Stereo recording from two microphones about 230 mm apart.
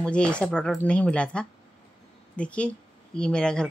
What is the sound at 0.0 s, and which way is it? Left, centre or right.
Speech, centre.